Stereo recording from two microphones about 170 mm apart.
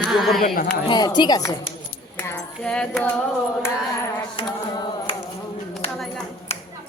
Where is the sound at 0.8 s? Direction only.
25° left (ahead or behind).